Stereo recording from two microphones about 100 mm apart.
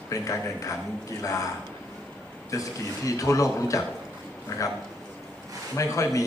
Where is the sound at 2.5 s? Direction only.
35° left (ahead or behind).